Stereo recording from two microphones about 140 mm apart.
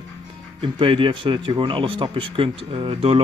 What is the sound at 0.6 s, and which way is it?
Speech, 40° right (ahead or behind).